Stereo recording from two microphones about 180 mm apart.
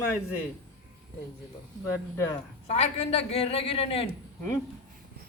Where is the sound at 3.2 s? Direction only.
35° left (ahead or behind).